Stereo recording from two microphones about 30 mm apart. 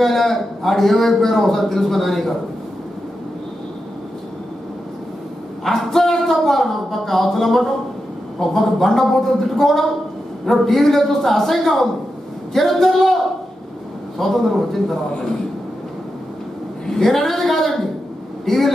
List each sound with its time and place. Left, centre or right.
0.0 s speech: centre
5.6 s speech: centre
17.0 s speech: centre